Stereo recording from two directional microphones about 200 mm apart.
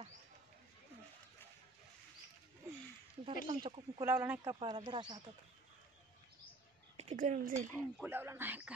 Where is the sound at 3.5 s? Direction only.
25° right (ahead or behind).